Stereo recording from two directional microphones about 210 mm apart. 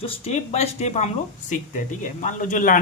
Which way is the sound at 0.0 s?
30° left (ahead or behind).